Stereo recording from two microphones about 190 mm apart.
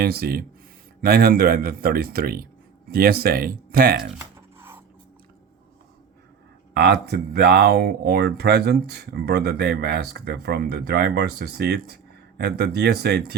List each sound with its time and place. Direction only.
0.0 s a man's voice: 55° right (ahead or behind)
4.2 s a sound: 10° right (ahead or behind)
6.7 s speech: 60° right (ahead or behind)